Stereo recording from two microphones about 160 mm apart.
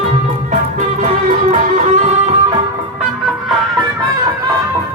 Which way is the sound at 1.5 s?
50° right (ahead or behind).